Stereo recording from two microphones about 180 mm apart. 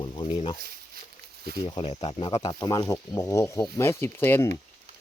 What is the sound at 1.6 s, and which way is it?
Speech, 25° left (ahead or behind).